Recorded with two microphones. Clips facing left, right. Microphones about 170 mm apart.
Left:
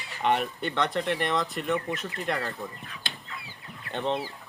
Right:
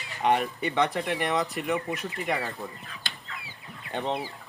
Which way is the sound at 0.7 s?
15° right (ahead or behind).